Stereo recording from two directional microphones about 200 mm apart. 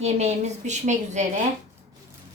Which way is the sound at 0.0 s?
35° right (ahead or behind).